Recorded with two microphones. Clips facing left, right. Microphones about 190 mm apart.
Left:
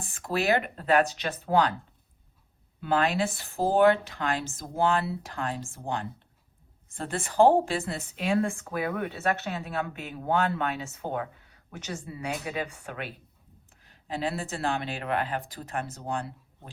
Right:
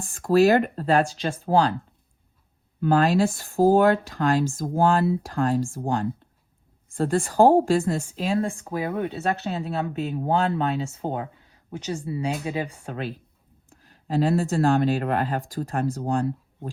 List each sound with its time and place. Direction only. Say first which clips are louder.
0.1 s speech: right 9 dB; 35° right (ahead or behind)
2.8 s speech: right 6 dB; 40° right (ahead or behind)